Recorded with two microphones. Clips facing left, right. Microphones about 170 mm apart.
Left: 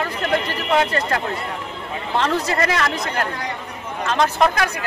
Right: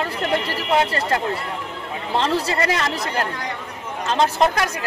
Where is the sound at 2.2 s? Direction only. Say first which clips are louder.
Left 1 dB; 30° right (ahead or behind).